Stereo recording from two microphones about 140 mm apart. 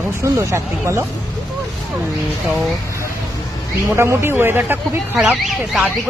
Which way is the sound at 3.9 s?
20° right (ahead or behind).